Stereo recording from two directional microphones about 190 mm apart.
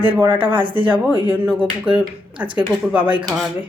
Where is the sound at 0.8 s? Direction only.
10° right (ahead or behind).